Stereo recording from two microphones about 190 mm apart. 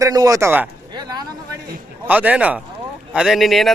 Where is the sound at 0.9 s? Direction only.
20° right (ahead or behind).